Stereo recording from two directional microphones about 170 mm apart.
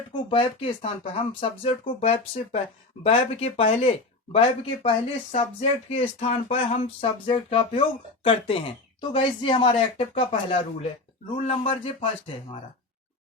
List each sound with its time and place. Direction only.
0.3 s speech: 35° left (ahead or behind)